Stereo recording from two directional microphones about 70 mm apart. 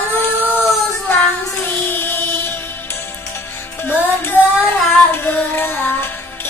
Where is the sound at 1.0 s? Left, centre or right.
Left.